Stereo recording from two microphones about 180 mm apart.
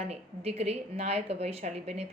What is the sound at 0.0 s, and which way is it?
Speech, 35° right (ahead or behind).